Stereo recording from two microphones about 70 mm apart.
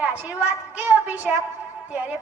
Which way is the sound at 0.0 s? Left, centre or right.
Centre.